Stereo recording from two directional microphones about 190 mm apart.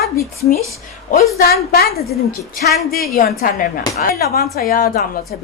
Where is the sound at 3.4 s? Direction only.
50° left (ahead or behind).